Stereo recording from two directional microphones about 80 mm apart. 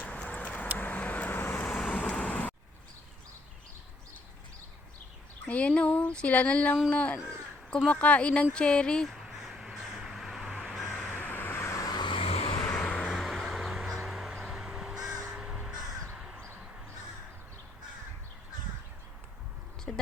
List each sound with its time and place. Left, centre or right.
0.0 s a sound: centre
0.8 s vehicle: centre
1.7 s vehicle: centre
5.5 s speech: centre
9.0 s a sound: centre
10.6 s crow: centre
11.1 s vehicle: left
11.9 s vehicle: left
12.8 s vehicle: centre
13.1 s a sound: centre
15.3 s crow: centre
19.9 s a sound: centre